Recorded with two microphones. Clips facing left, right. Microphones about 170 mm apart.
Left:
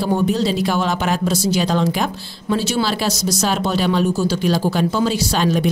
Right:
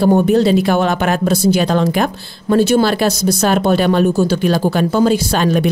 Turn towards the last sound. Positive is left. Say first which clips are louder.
# right 3 dB
turn(degrees=-55)  # may be behind; listen again after turning